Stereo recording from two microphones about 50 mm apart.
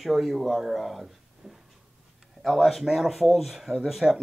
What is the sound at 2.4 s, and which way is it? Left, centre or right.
Speech, centre.